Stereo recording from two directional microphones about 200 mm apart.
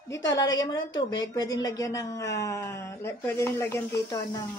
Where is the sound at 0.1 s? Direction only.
20° left (ahead or behind).